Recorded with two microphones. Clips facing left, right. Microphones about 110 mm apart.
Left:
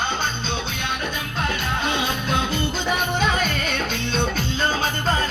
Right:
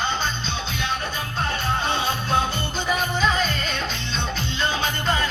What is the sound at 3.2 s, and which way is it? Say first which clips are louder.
Music: even; 60° left (ahead or behind).